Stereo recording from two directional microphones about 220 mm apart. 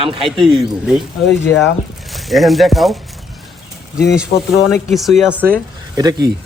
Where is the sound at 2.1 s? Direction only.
Centre (ahead or behind).